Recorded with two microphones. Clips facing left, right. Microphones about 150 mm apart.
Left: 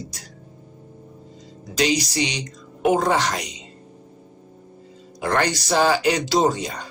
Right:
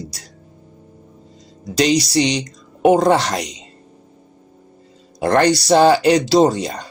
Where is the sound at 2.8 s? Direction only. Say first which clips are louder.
Right 6 dB; 90° right.